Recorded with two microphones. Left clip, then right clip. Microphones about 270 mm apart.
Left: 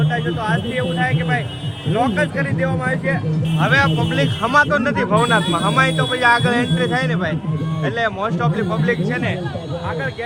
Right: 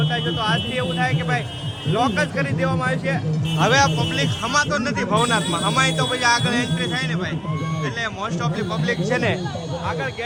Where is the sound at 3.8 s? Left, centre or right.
Centre.